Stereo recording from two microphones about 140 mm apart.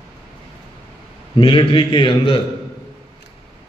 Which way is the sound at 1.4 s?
40° left (ahead or behind).